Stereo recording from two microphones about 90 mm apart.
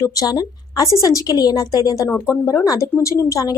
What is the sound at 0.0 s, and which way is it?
A woman's voice, 40° left (ahead or behind).